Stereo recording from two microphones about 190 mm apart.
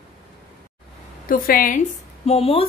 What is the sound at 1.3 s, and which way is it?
Speech, 50° left (ahead or behind).